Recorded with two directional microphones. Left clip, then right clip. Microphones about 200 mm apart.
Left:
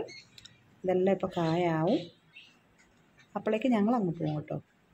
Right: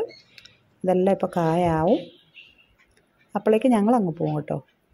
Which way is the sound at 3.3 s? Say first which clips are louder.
Right 9 dB; 25° right (ahead or behind).